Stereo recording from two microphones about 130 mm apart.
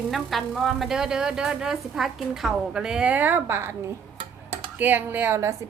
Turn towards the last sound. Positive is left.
turn(degrees=-20)  # may be behind; listen again after turning